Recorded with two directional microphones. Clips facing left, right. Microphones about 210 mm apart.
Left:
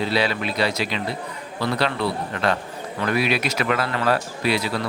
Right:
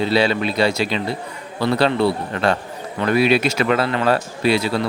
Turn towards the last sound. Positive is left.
turn(degrees=-30)  # may be behind; listen again after turning